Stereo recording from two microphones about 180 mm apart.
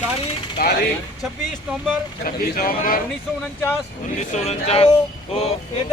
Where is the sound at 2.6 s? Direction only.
55° left (ahead or behind).